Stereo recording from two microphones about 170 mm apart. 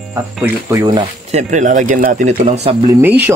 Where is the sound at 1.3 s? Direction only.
45° right (ahead or behind).